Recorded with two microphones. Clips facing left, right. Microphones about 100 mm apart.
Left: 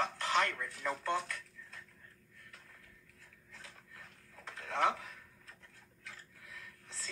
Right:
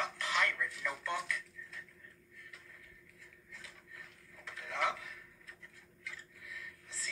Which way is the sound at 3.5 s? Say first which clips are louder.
Even; 40° left (ahead or behind).